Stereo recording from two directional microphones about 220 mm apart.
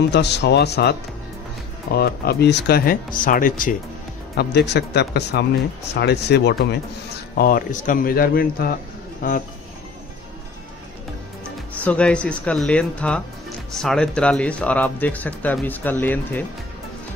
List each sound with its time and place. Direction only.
0.1 s speech: 50° left (ahead or behind)
2.0 s speech: 45° left (ahead or behind)
11.4 s speech: 5° left (ahead or behind)